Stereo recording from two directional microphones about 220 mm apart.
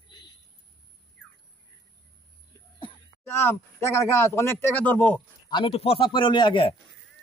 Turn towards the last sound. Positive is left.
turn(degrees=20)  # may be behind; listen again after turning